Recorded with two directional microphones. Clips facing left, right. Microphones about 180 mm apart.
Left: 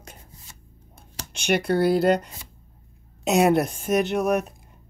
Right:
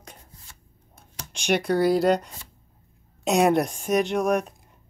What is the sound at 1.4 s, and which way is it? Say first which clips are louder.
Speech: even; centre (ahead or behind).